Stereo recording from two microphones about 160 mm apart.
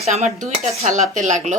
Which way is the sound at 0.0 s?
45° right (ahead or behind).